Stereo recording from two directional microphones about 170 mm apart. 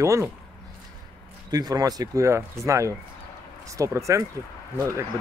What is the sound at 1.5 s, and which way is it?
Speech, 20° right (ahead or behind).